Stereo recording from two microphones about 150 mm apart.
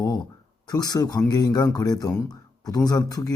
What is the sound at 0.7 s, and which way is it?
A man's voice, 25° left (ahead or behind).